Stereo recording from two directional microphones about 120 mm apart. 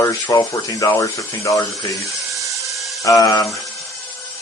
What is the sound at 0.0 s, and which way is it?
Speech, 30° left (ahead or behind).